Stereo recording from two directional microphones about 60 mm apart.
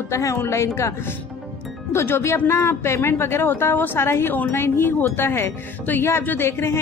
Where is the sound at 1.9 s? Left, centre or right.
Left.